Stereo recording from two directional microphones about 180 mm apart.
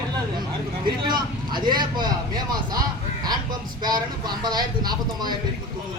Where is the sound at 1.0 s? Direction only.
25° right (ahead or behind).